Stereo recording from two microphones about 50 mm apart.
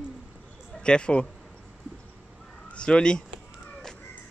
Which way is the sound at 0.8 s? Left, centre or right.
Centre.